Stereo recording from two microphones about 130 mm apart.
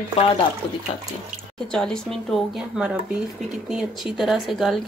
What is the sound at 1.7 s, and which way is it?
A woman's voice, 5° left (ahead or behind).